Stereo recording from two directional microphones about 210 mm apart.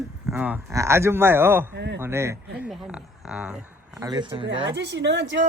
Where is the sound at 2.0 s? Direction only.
10° right (ahead or behind).